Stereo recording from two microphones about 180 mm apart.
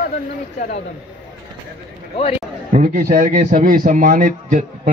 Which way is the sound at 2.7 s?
55° right (ahead or behind).